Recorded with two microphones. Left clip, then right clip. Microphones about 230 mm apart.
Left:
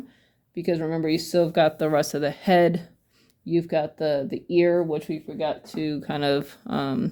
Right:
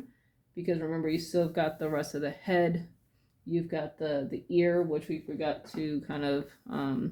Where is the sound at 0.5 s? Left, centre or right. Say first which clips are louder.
Left 7 dB; left.